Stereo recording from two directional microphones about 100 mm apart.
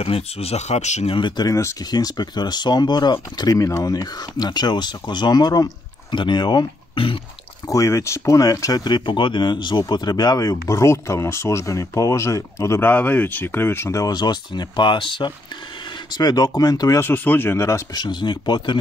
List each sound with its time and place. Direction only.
0.0 s speech: 80° left; by 1.5 s 50° left (ahead or behind)
1.5 s speech: 30° left (ahead or behind)
1.8 s speech: 40° left (ahead or behind)
3.5 s speech: 35° left (ahead or behind)
7.0 s throat clearing: 65° left (ahead or behind)
7.6 s speech: 30° left (ahead or behind); by 15.3 s 55° left (ahead or behind)
16.1 s speech: 40° left (ahead or behind)
17.0 s speech: 20° left (ahead or behind)
17.9 s speech: 50° left (ahead or behind)